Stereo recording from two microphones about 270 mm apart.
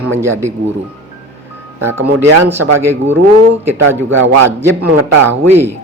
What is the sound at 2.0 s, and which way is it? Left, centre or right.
Speech, right.